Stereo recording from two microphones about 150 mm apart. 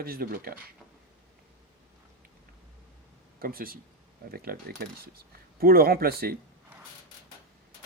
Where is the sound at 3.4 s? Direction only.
75° right (ahead or behind).